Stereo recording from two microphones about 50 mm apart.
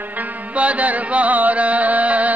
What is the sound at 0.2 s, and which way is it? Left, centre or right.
Music, right.